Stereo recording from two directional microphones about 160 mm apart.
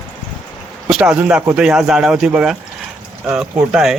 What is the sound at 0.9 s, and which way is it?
Speech, 5° right (ahead or behind).